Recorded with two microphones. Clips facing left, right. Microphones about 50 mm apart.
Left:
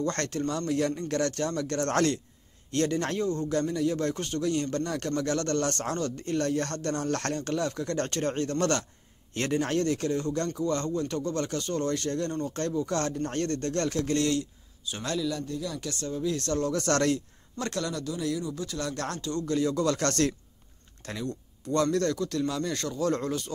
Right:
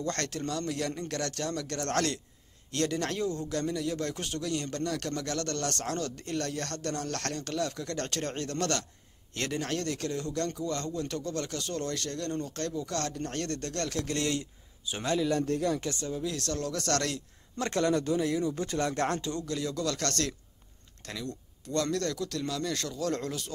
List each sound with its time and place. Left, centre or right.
0.0 s speech: centre
3.2 s speech: centre
15.6 s speech: right
15.9 s speech: centre
17.6 s speech: right
18.4 s speech: right
18.8 s speech: right
19.4 s speech: centre